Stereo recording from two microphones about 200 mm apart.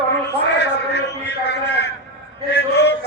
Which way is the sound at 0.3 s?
60° left (ahead or behind).